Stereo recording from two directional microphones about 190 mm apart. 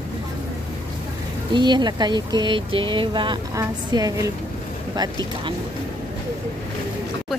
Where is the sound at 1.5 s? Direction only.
25° right (ahead or behind).